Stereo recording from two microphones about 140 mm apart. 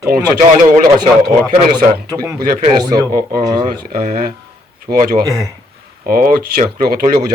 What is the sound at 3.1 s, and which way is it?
Speech, 90° right.